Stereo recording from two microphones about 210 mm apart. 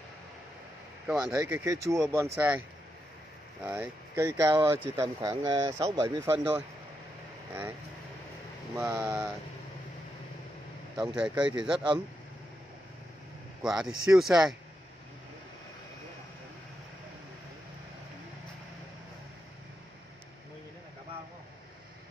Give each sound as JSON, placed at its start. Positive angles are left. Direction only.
{"t": 1.0, "sound": "speech", "side_deg": -10}
{"t": 3.6, "sound": "speech", "side_deg": -10}
{"t": 8.7, "sound": "speech", "side_deg": -10}
{"t": 11.0, "sound": "speech", "side_deg": -5}
{"t": 13.6, "sound": "speech", "side_deg": 0}